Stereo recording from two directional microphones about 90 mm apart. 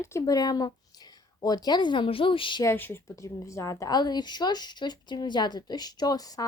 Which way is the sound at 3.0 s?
35° left (ahead or behind).